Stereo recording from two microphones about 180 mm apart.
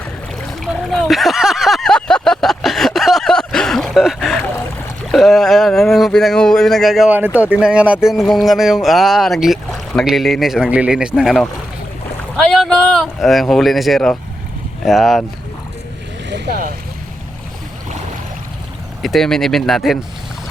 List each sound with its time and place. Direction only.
0.6 s a sound: centre (ahead or behind)
7.5 s speech: 5° right (ahead or behind)
16.3 s boat: 60° right (ahead or behind)
19.0 s speech: centre (ahead or behind)